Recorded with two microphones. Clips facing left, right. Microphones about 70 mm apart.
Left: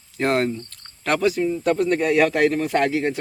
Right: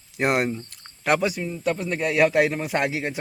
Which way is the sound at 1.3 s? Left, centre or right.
Centre.